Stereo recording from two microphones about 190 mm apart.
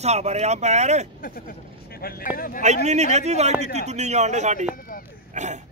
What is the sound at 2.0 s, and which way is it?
Speech, 50° left (ahead or behind).